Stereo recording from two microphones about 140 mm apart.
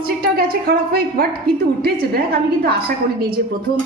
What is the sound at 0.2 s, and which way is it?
A woman's voice, 90° right.